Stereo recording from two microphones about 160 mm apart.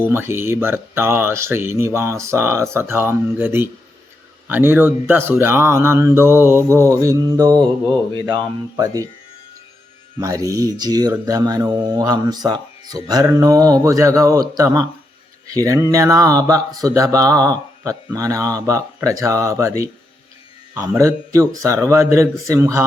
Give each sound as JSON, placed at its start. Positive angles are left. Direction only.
{"t": 0.0, "sound": "speech", "side_deg": -15}
{"t": 10.2, "sound": "speech", "side_deg": -20}